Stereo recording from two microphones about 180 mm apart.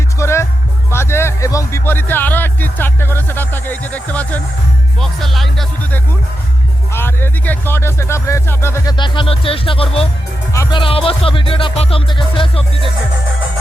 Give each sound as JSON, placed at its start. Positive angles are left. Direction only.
{"t": 0.2, "sound": "music", "side_deg": 15}
{"t": 0.9, "sound": "speech", "side_deg": 15}
{"t": 6.9, "sound": "speech", "side_deg": 10}
{"t": 9.0, "sound": "music", "side_deg": 25}
{"t": 10.5, "sound": "speech", "side_deg": 15}
{"t": 10.8, "sound": "music", "side_deg": 30}